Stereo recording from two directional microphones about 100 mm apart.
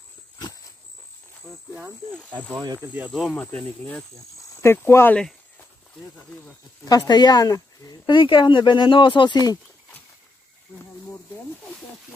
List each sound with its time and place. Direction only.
2.5 s speech: 45° right (ahead or behind)
3.3 s speech: 10° left (ahead or behind)
4.4 s speech: 25° left (ahead or behind)
5.1 s a sound: 15° left (ahead or behind)
6.8 s speech: 40° left (ahead or behind)